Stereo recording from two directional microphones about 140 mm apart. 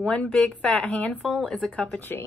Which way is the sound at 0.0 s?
5° left (ahead or behind).